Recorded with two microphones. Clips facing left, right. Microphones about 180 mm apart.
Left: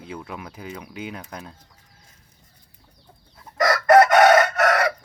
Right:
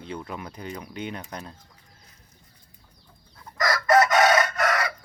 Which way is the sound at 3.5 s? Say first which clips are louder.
Left 5 dB; 65° left (ahead or behind).